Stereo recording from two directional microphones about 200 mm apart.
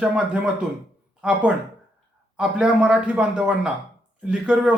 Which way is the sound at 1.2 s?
5° right (ahead or behind).